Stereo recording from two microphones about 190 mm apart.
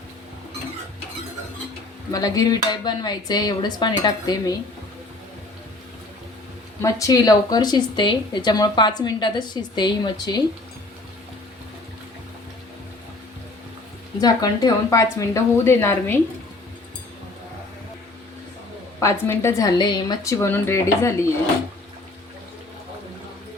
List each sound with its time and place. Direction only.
2.1 s speech: 20° left (ahead or behind)
6.8 s speech: 15° left (ahead or behind)
14.2 s a woman's voice: 20° left (ahead or behind)
18.9 s a woman's voice: 15° left (ahead or behind)